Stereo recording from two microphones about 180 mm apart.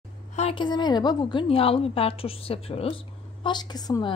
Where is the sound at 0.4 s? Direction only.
30° left (ahead or behind).